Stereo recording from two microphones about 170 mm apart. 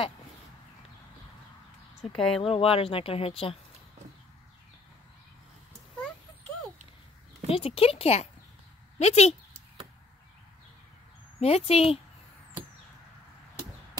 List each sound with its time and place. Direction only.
2.1 s speech: 5° left (ahead or behind)
2.4 s speech: 35° left (ahead or behind)
7.4 s speech: 35° left (ahead or behind)
11.3 s speech: 35° left (ahead or behind)